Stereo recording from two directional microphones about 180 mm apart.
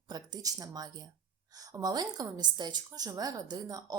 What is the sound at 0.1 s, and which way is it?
A woman's voice, 20° right (ahead or behind).